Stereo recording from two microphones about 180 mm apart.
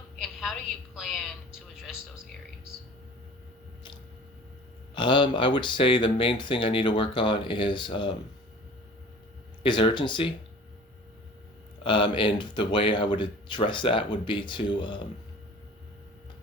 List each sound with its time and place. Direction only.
0.2 s a sound: centre (ahead or behind)
4.9 s speech: 25° left (ahead or behind)
9.6 s speech: 25° left (ahead or behind)
11.8 s speech: 25° left (ahead or behind)